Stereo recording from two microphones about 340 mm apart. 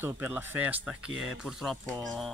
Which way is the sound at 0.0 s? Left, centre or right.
Centre.